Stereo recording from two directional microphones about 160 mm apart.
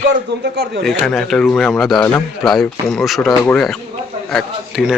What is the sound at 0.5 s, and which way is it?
Speech, 90° right.